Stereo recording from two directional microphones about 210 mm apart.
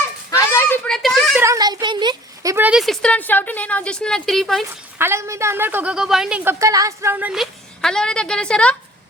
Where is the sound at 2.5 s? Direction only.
5° right (ahead or behind).